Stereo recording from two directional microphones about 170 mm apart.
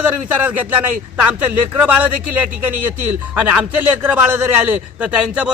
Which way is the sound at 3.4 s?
10° right (ahead or behind).